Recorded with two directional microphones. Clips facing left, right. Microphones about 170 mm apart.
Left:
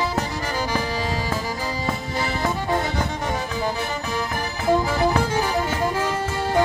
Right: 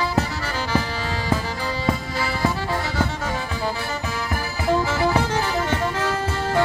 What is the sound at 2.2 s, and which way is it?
Music, 20° left (ahead or behind).